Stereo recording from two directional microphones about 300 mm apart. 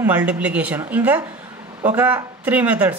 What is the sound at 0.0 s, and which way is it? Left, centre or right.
Speech, centre.